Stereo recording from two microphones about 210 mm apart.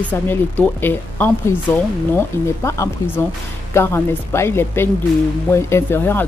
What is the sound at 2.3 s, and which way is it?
Speech, 10° left (ahead or behind).